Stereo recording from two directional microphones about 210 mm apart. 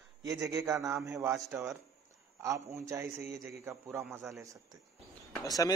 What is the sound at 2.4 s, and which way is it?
A man's voice, 15° right (ahead or behind).